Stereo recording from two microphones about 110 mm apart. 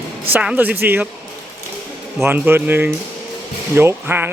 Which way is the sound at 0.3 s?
15° right (ahead or behind).